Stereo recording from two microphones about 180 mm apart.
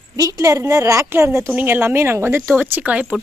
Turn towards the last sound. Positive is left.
turn(degrees=-5)  # may be behind; listen again after turning